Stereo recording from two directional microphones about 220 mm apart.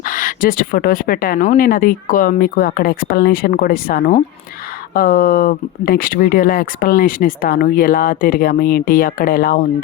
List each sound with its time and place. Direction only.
0.0 s speech: 40° left (ahead or behind)